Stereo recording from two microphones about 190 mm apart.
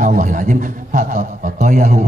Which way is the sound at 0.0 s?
40° right (ahead or behind).